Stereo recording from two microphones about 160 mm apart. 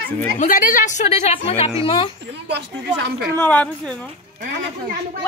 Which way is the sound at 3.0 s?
90° right.